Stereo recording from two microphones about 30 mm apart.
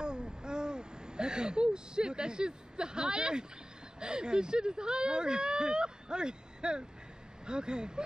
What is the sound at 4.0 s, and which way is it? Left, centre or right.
Speech, right.